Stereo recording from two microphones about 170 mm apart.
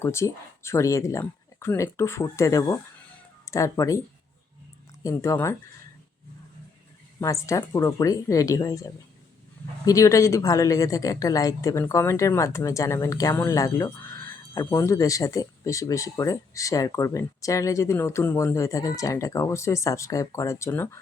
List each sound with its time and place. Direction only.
0.0 s speech: 15° left (ahead or behind)
5.0 s speech: 20° left (ahead or behind)
7.2 s speech: 20° left (ahead or behind)